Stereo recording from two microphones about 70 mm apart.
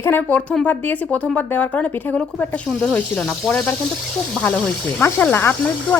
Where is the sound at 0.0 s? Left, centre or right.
Left.